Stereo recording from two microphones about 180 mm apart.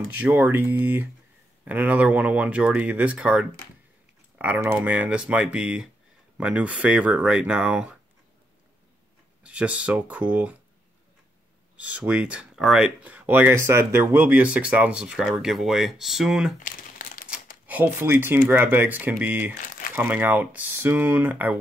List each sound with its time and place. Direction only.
0.2 s speech: 10° right (ahead or behind)
9.4 s speech: 5° right (ahead or behind)
11.7 s speech: 10° right (ahead or behind)
16.5 s crumpling: 50° left (ahead or behind)
17.6 s speech: 10° right (ahead or behind)
19.6 s crumpling: 50° left (ahead or behind)
20.0 s speech: 10° right (ahead or behind)